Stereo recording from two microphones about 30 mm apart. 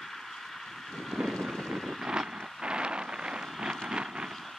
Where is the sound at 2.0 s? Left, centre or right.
Right.